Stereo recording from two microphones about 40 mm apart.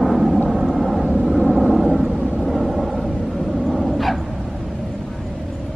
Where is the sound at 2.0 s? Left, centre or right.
Right.